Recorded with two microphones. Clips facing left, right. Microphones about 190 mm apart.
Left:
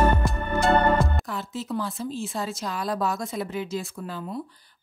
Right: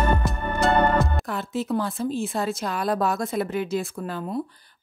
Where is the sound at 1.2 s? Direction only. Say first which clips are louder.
Right 4 dB; 60° right (ahead or behind).